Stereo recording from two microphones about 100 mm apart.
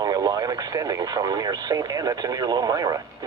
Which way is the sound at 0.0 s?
40° right (ahead or behind).